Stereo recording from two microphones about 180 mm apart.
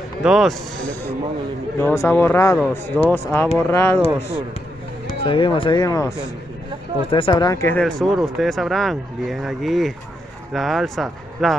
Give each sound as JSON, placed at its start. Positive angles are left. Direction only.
{"t": 0.2, "sound": "speech", "side_deg": 0}
{"t": 1.8, "sound": "speech", "side_deg": 15}
{"t": 5.2, "sound": "speech", "side_deg": 30}
{"t": 7.8, "sound": "speech", "side_deg": 0}